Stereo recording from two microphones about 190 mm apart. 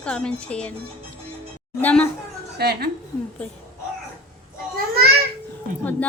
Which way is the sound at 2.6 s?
55° right (ahead or behind).